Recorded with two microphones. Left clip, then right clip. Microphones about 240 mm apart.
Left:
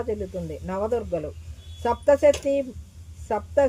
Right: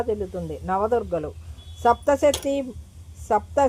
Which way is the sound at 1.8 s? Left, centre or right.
Centre.